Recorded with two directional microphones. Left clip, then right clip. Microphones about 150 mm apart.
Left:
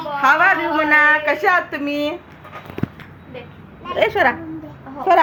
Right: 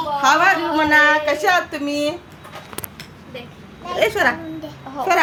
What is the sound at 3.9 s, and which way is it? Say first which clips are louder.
Speech: left 1 dB; 25° left (ahead or behind).